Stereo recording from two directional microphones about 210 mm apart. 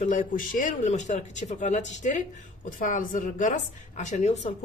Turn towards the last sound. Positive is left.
turn(degrees=35)  # may be behind; listen again after turning